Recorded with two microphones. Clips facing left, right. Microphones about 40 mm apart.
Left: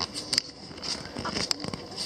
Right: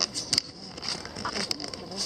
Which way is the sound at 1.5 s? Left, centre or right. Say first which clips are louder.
Left 1 dB; centre.